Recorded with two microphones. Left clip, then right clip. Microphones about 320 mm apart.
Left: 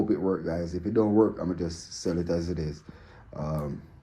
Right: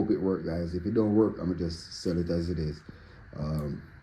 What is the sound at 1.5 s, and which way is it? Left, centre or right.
Speech, centre.